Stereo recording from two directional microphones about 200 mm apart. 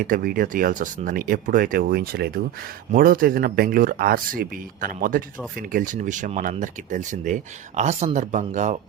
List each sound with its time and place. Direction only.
0.0 s speech: 45° right (ahead or behind)